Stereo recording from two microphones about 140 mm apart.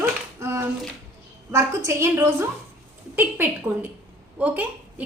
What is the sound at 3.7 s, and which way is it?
A woman's voice, 15° right (ahead or behind).